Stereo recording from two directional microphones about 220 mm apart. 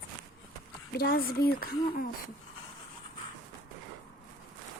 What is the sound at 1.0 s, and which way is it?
A child's voice, 45° left (ahead or behind).